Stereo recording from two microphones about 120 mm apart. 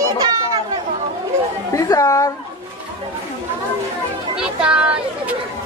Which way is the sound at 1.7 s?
30° left (ahead or behind).